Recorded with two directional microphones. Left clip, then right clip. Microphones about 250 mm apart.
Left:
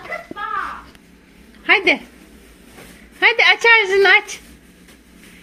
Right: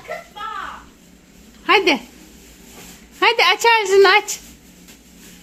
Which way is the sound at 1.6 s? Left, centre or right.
Right.